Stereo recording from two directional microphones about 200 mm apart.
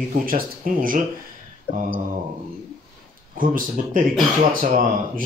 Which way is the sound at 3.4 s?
45° right (ahead or behind).